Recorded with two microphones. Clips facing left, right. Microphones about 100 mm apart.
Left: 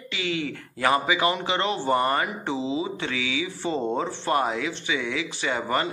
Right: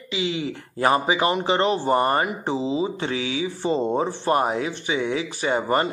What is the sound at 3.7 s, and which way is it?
Speech, 20° right (ahead or behind).